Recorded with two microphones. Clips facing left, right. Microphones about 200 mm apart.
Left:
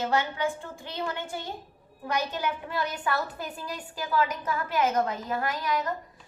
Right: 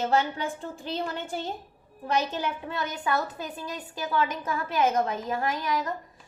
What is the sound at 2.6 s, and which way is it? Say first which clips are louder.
A woman's voice: even; 20° right (ahead or behind).